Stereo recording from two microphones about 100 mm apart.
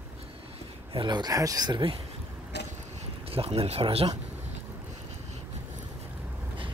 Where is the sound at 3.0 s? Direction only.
85° right.